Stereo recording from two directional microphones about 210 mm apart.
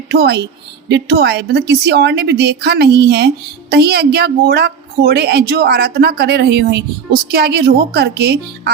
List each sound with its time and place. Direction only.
0.1 s a woman's voice: 50° right (ahead or behind)